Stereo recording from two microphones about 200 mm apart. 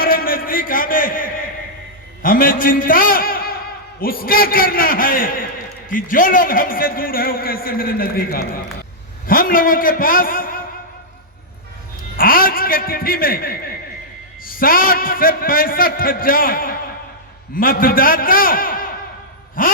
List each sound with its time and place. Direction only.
0.0 s a sound: 45° left (ahead or behind)
2.2 s a man's voice: 45° left (ahead or behind)
12.1 s a man's voice: 45° left (ahead or behind)